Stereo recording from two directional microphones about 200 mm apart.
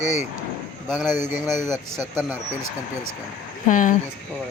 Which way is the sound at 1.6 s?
15° right (ahead or behind).